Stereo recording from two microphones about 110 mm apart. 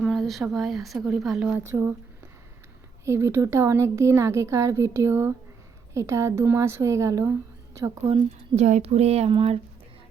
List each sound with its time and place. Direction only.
0.0 s a sound: 5° left (ahead or behind)
0.4 s speech: centre (ahead or behind)
1.5 s speech: 25° right (ahead or behind)
3.0 s speech: 25° right (ahead or behind)
8.0 s speech: 60° right (ahead or behind)